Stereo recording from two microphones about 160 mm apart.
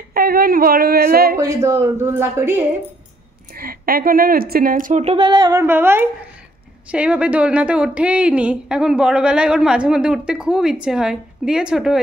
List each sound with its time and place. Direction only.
0.1 s a sound: 70° right (ahead or behind)
1.4 s speech: 15° right (ahead or behind)
3.5 s speech: 65° right (ahead or behind)
5.1 s a woman's voice: 30° right (ahead or behind); by 12.0 s 5° right (ahead or behind)